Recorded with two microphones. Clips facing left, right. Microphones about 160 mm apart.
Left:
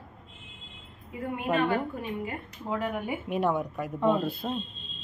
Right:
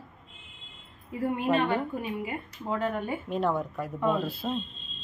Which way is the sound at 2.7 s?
10° left (ahead or behind).